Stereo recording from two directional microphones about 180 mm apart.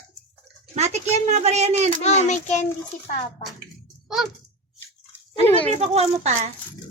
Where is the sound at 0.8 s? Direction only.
40° right (ahead or behind).